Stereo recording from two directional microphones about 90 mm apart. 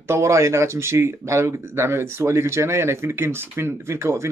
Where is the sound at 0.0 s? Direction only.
30° right (ahead or behind).